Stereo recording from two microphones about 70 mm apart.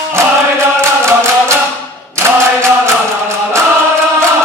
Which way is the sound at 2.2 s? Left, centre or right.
Right.